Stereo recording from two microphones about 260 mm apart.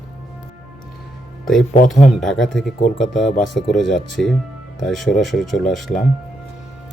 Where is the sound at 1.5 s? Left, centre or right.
Centre.